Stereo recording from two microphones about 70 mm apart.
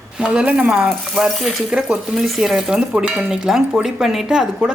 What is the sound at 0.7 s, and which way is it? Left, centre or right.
Speech, centre.